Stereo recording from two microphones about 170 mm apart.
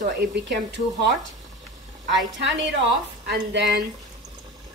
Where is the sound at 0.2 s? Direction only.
80° right.